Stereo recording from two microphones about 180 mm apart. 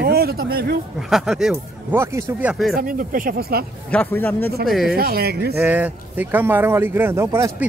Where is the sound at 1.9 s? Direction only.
15° right (ahead or behind).